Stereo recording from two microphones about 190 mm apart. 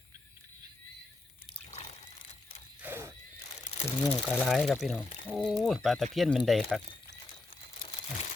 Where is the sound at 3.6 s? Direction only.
30° left (ahead or behind).